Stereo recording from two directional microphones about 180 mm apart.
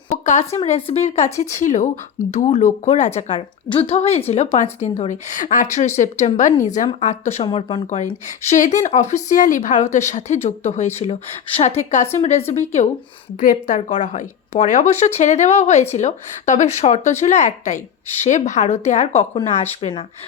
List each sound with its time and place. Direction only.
0.1 s a woman's voice: 40° left (ahead or behind)
7.4 s speech: 25° left (ahead or behind)
8.4 s a woman's voice: 45° left (ahead or behind)